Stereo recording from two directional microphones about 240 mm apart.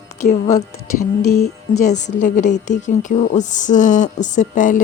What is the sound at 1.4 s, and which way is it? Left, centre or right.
Speech, left.